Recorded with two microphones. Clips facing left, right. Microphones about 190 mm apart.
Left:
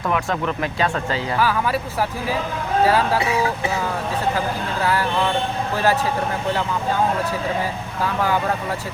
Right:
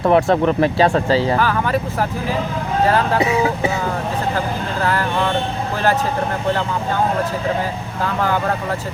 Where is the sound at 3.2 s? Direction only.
20° right (ahead or behind).